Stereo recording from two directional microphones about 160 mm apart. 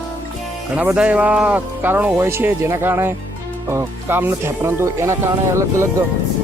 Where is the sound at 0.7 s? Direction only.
10° right (ahead or behind).